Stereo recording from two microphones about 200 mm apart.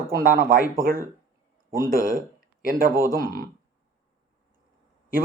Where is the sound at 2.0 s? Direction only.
45° right (ahead or behind).